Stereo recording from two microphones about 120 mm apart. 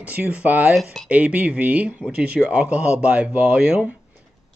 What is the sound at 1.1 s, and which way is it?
Speech, 10° right (ahead or behind).